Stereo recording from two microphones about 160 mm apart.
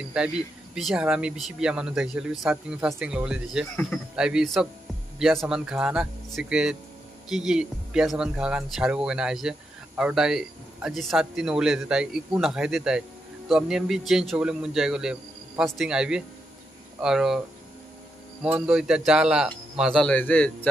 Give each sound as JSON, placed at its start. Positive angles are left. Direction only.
{"t": 0.7, "sound": "speech", "side_deg": -5}
{"t": 18.4, "sound": "speech", "side_deg": -5}